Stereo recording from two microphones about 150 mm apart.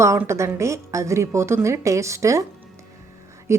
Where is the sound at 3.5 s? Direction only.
20° right (ahead or behind).